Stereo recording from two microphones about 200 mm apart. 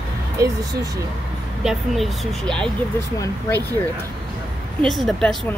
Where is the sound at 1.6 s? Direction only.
Centre (ahead or behind).